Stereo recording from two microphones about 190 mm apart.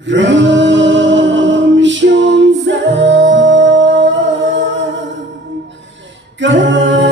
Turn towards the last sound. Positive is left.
turn(degrees=-70)  # may be behind; listen again after turning